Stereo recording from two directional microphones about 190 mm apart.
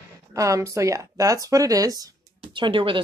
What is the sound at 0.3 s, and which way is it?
A woman's voice, 15° right (ahead or behind).